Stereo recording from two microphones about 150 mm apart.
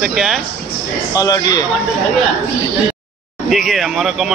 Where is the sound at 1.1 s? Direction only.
25° left (ahead or behind).